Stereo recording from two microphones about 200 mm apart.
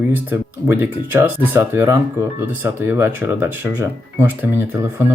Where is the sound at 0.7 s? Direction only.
10° right (ahead or behind).